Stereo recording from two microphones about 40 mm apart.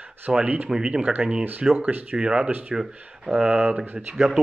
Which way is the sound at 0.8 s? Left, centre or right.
Right.